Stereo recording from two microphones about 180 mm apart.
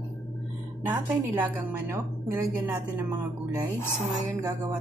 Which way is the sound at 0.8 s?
10° right (ahead or behind).